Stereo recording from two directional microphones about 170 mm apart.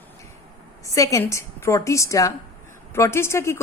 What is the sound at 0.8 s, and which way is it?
A woman's voice, 20° left (ahead or behind).